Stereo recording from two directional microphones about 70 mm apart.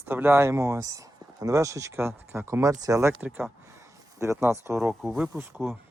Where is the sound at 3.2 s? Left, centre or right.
Centre.